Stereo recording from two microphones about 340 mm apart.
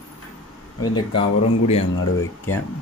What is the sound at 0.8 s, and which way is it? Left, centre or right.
Speech, centre.